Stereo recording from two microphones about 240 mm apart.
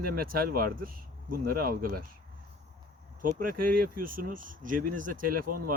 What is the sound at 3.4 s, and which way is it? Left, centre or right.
Speech, right.